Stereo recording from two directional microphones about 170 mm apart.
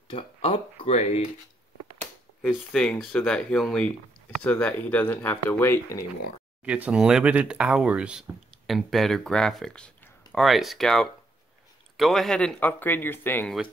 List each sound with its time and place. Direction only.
0.1 s speech: 35° left (ahead or behind)
2.4 s speech: 5° left (ahead or behind)
6.6 s speech: 5° right (ahead or behind); by 13.6 s 10° left (ahead or behind)